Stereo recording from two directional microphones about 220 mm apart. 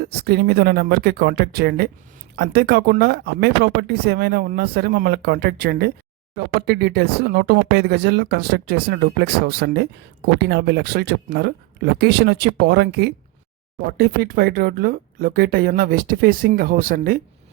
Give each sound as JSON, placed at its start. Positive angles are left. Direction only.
{"t": 0.0, "sound": "speech", "side_deg": -45}